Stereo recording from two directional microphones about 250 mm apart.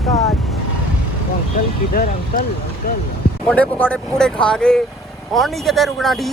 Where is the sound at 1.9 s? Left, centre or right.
Left.